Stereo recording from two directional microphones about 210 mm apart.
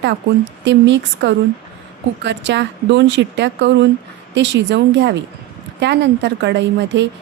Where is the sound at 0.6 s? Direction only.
60° right (ahead or behind).